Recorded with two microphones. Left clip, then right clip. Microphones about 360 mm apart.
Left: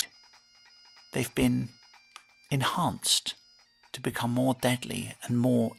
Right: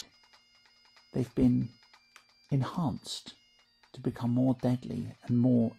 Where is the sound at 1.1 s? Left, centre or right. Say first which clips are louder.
Left 1 dB; left.